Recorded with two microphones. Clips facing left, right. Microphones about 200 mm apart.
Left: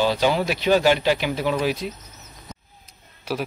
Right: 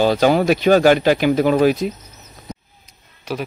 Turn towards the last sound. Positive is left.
turn(degrees=5)  # may be behind; listen again after turning